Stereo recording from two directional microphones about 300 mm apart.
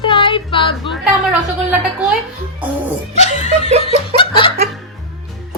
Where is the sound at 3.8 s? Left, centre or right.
Centre.